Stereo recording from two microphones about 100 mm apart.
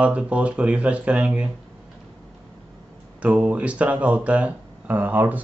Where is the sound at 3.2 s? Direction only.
15° right (ahead or behind).